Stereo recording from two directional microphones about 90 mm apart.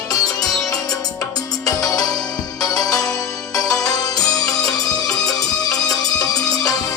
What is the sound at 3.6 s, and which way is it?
Music, 5° left (ahead or behind).